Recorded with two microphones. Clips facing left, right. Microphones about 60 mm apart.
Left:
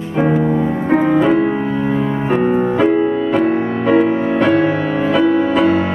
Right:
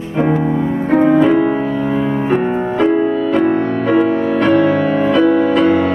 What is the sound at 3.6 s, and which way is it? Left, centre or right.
Music, centre.